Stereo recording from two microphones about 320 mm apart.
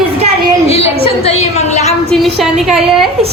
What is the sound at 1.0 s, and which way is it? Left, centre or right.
Speech, centre.